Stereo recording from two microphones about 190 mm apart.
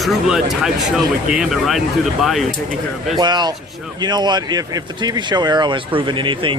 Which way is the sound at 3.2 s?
20° right (ahead or behind).